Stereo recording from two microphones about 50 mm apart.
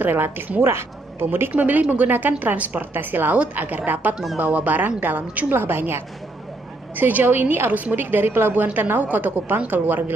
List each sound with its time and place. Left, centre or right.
0.0 s a woman's voice: right
1.5 s a woman's voice: right
2.9 s a woman's voice: right
5.5 s a woman's voice: right
7.0 s a woman's voice: right
7.2 s a woman's voice: right